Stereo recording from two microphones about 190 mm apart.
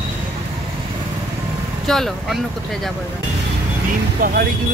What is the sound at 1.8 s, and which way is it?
Speech, centre (ahead or behind).